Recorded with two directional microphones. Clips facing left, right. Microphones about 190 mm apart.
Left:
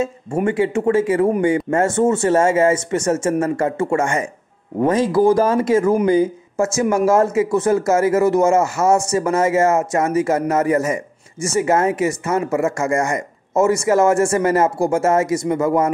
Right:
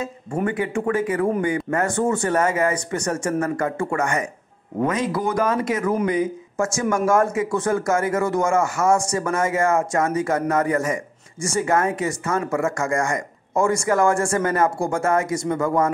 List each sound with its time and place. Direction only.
0.5 s speech: 25° left (ahead or behind)